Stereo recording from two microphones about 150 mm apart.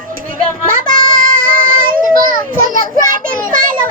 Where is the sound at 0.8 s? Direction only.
70° right (ahead or behind).